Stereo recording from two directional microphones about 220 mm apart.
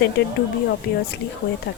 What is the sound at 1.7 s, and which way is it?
Speech, 50° left (ahead or behind).